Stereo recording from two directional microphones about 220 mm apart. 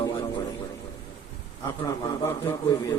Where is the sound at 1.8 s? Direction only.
15° left (ahead or behind).